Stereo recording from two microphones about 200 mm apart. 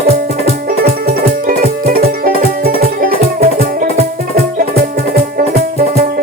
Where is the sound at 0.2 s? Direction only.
50° right (ahead or behind).